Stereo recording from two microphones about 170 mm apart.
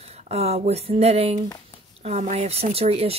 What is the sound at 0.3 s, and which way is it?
Speech, 40° right (ahead or behind).